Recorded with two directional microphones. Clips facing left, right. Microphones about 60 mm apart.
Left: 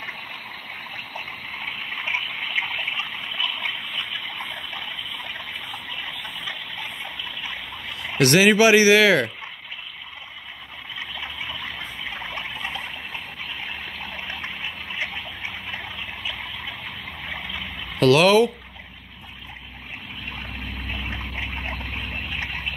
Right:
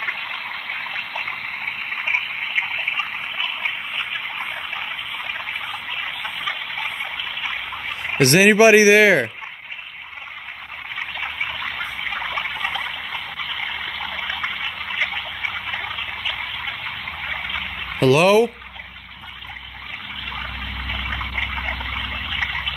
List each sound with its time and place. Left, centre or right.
0.0 s stream: right
1.9 s water: right
11.0 s water: right
18.0 s speech: centre
20.8 s a sound: right